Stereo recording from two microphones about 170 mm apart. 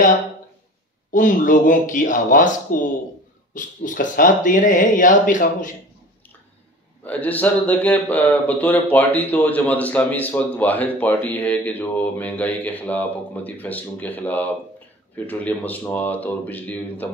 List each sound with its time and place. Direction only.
1.1 s speech: 50° left (ahead or behind)
7.1 s speech: 10° left (ahead or behind)